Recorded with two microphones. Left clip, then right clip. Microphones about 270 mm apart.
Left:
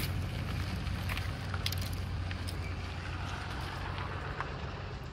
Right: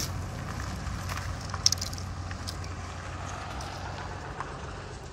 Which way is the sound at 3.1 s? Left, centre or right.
Right.